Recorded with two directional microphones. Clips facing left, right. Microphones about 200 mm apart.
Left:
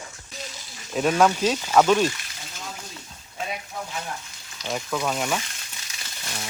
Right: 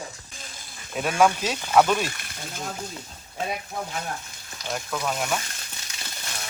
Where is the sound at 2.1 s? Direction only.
55° right (ahead or behind).